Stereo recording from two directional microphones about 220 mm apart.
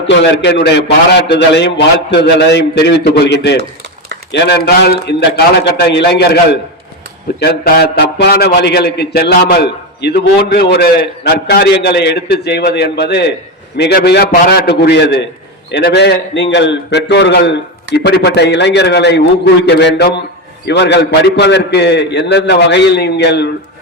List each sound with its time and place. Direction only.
0.1 s a man's voice: 55° left (ahead or behind)